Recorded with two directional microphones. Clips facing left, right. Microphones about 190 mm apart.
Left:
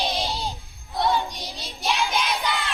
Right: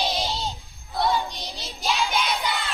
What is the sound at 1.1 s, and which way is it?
Child singing, 15° left (ahead or behind).